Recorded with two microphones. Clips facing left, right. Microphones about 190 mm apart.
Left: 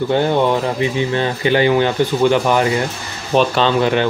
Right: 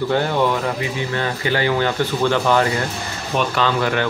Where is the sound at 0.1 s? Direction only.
20° left (ahead or behind).